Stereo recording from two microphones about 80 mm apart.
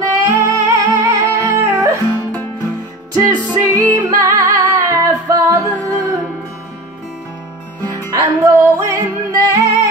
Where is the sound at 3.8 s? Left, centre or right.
Right.